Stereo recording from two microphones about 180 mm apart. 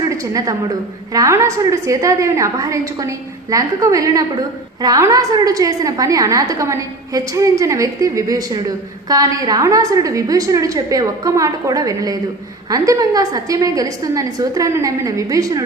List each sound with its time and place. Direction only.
0.1 s a woman's voice: 20° right (ahead or behind)